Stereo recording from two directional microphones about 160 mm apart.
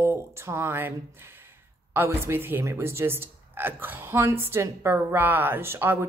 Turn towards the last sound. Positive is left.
turn(degrees=-15)  # may be behind; listen again after turning